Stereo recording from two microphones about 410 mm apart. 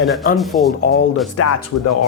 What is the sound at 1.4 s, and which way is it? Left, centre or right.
Speech, left.